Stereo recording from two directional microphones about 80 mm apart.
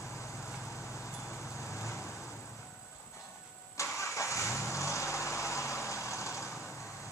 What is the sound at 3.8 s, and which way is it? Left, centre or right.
Vehicle, left.